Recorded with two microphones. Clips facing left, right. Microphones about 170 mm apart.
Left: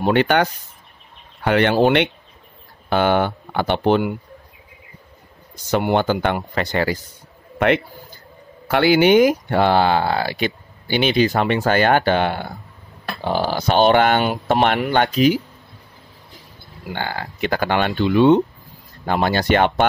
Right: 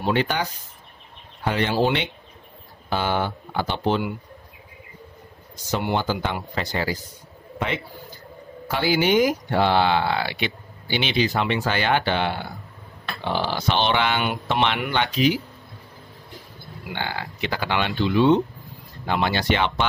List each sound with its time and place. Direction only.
0.0 s speech: 65° left (ahead or behind)
5.9 s a man's voice: 60° left (ahead or behind); by 15.4 s 45° left (ahead or behind)
16.9 s speech: 45° left (ahead or behind)